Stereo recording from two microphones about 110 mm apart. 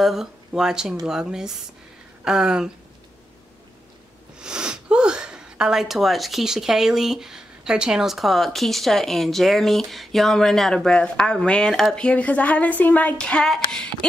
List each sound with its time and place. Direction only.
0.0 s speech: 5° right (ahead or behind)
4.4 s speech: 5° right (ahead or behind)